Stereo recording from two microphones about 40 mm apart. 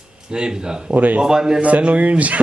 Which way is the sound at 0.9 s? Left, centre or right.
Right.